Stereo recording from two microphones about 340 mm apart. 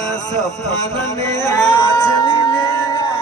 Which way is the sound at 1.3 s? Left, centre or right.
Centre.